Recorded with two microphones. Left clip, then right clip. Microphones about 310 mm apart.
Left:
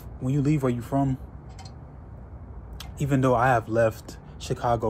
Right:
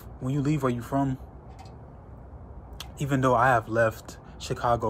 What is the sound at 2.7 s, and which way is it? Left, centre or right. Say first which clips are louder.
Speech: left 2 dB; centre.